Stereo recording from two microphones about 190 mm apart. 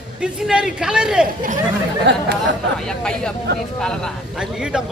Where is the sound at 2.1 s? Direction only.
65° right (ahead or behind).